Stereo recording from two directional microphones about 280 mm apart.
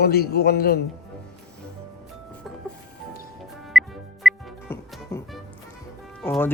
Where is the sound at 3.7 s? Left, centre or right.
Centre.